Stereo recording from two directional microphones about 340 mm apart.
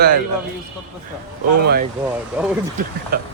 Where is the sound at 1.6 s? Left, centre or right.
Right.